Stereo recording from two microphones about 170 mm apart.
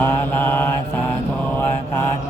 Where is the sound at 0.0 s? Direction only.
10° left (ahead or behind).